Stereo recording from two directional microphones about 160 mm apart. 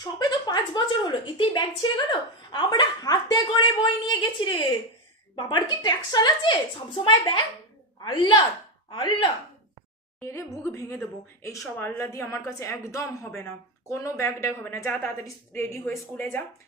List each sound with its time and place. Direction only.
0.0 s a woman's voice: 25° left (ahead or behind)
10.2 s a woman's voice: 20° left (ahead or behind)